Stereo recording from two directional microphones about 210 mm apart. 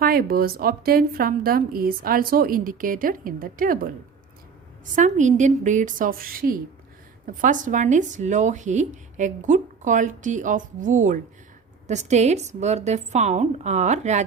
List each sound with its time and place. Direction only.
0.0 s a woman's voice: 45° right (ahead or behind)
4.9 s speech: 35° right (ahead or behind)